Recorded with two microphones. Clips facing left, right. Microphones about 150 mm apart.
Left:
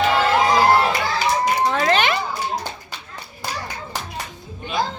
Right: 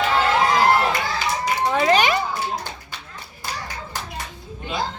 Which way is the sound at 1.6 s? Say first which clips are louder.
Right 5 dB; 10° right (ahead or behind).